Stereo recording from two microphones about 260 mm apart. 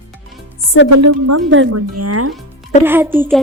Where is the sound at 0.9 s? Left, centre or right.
Right.